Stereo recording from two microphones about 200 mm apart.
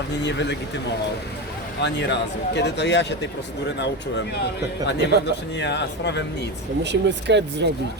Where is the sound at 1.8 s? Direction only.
60° left (ahead or behind).